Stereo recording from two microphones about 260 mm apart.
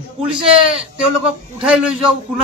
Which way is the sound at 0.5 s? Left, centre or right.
Right.